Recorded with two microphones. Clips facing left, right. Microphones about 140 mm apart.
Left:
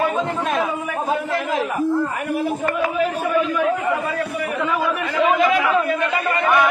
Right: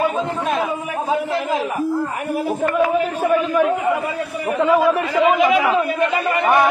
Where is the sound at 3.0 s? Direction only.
35° right (ahead or behind).